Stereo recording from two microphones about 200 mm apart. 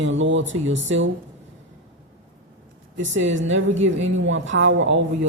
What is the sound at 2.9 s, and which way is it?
A woman's voice, 70° right (ahead or behind).